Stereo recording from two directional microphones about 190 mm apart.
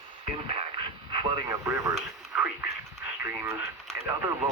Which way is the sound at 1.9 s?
5° right (ahead or behind).